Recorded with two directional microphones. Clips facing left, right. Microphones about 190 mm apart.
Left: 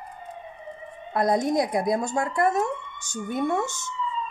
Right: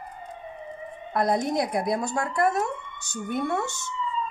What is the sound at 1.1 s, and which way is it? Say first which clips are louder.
Speech: left 2 dB; 20° left (ahead or behind).